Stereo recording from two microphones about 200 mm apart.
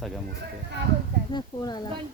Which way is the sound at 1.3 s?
20° left (ahead or behind).